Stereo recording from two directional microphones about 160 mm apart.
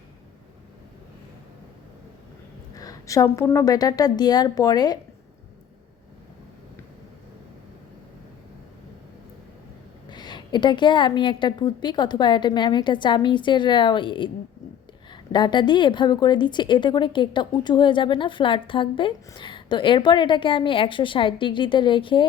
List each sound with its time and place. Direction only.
2.7 s a woman's voice: 20° left (ahead or behind)
10.1 s a woman's voice: 30° left (ahead or behind)